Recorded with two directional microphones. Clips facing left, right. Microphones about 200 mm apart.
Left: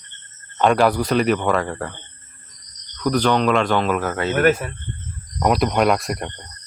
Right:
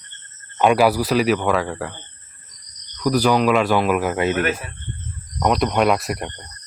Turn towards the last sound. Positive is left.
turn(degrees=0)  # may be behind; listen again after turning